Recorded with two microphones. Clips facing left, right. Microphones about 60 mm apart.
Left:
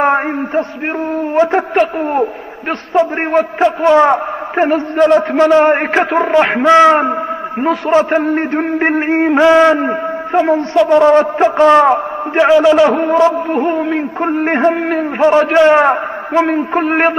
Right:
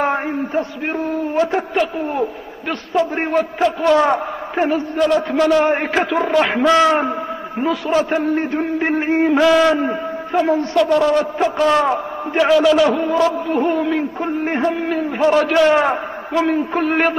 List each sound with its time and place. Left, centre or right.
0.0 s a sound: left
1.3 s a man's voice: left
1.7 s a man's voice: left
4.6 s a man's voice: left
12.9 s a man's voice: left
13.2 s a man's voice: left
14.2 s a man's voice: left
15.1 s a man's voice: left